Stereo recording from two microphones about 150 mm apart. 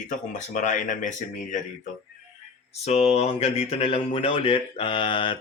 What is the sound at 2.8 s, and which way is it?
Speech, 45° left (ahead or behind).